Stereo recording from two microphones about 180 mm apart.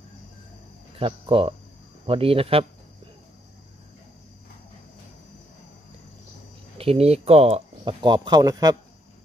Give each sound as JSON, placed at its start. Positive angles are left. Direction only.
{"t": 0.9, "sound": "speech", "side_deg": -30}
{"t": 6.8, "sound": "speech", "side_deg": -35}